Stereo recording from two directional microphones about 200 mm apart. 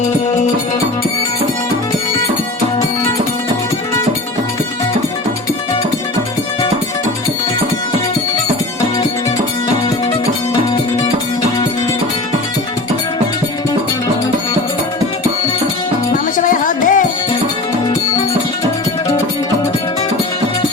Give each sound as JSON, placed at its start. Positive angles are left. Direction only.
{"t": 16.4, "sound": "music", "side_deg": 40}